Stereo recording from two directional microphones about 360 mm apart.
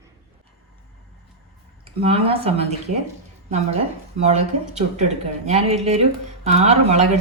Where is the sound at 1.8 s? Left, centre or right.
Centre.